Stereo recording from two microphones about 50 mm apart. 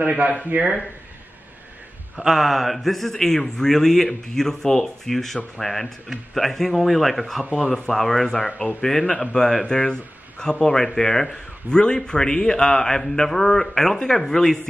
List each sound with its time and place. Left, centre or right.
0.5 s speech: right
2.1 s a man's voice: centre